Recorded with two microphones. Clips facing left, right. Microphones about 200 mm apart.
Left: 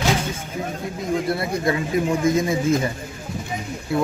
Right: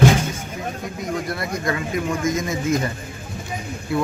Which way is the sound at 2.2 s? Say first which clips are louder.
Left 3 dB; 30° left (ahead or behind).